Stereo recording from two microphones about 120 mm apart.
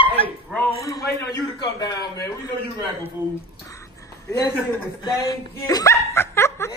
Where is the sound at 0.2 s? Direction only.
50° left (ahead or behind).